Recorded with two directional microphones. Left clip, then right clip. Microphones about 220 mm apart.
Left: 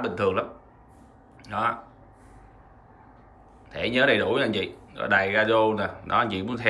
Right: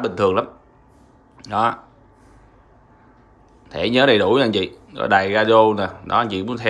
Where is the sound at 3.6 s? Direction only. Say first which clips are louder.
Right 6 dB; 15° right (ahead or behind).